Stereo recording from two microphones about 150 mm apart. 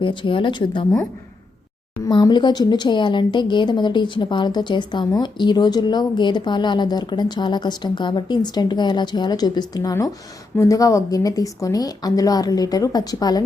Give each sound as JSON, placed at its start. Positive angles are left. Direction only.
{"t": 0.0, "sound": "speech", "side_deg": 35}
{"t": 2.0, "sound": "speech", "side_deg": 25}